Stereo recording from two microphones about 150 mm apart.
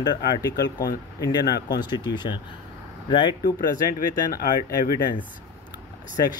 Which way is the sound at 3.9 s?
80° left.